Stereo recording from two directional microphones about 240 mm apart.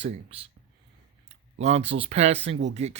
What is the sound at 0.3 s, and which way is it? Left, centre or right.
Speech, right.